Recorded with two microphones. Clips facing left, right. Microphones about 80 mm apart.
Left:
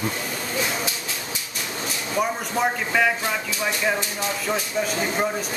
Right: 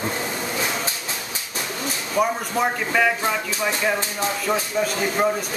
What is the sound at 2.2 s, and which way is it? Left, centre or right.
Speech, centre.